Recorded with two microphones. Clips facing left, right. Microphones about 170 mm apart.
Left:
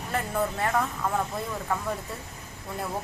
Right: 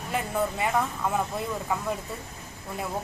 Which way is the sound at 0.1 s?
10° right (ahead or behind).